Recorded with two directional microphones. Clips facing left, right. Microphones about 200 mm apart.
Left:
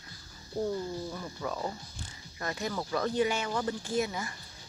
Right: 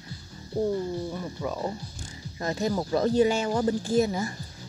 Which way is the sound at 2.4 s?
30° right (ahead or behind).